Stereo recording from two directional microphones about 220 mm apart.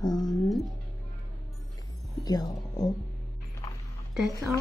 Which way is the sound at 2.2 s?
15° left (ahead or behind).